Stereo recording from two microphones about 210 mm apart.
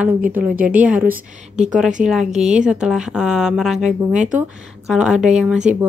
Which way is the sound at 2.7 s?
5° right (ahead or behind).